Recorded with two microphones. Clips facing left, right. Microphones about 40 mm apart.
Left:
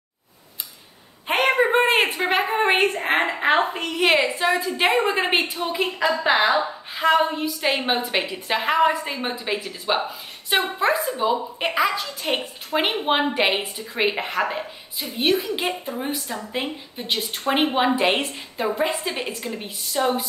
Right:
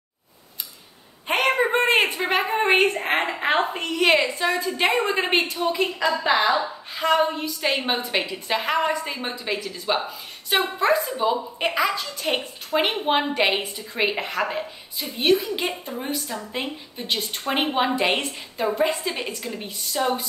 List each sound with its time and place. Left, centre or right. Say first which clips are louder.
1.2 s a sound: left 2 dB; centre
3.2 s a woman's voice: left 4 dB; centre
7.0 s a woman's voice: left 2 dB; centre